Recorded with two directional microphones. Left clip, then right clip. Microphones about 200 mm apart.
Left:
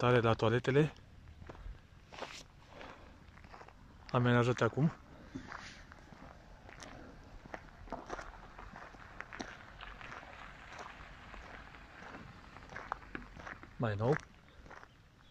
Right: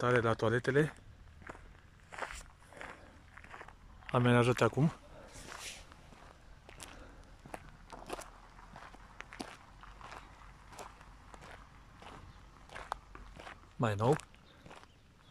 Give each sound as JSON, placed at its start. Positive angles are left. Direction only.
{"t": 0.0, "sound": "speech", "side_deg": 5}
{"t": 2.1, "sound": "walk", "side_deg": 15}
{"t": 2.8, "sound": "walk", "side_deg": 0}
{"t": 4.0, "sound": "speech", "side_deg": 0}
{"t": 5.3, "sound": "walk", "side_deg": -15}
{"t": 7.5, "sound": "walk", "side_deg": -5}
{"t": 12.7, "sound": "walk", "side_deg": 0}
{"t": 13.4, "sound": "a sound", "side_deg": 0}